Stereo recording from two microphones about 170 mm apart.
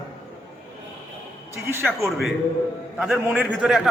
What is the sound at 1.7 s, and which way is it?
Speech, 15° right (ahead or behind).